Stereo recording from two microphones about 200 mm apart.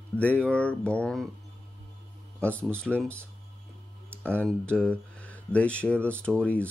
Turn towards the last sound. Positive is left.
turn(degrees=5)  # may be behind; listen again after turning